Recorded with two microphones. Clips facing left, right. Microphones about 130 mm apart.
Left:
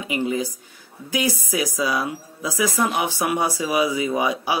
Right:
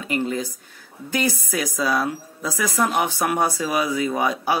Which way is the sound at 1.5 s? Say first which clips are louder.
Even; 5° left (ahead or behind).